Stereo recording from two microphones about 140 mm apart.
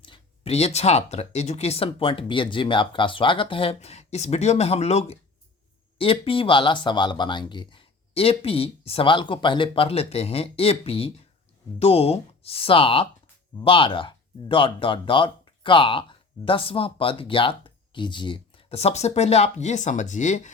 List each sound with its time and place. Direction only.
0.0 s speech: 40° left (ahead or behind); by 20.5 s 60° left (ahead or behind)